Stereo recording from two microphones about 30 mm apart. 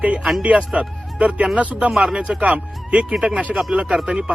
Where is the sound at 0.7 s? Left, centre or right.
Right.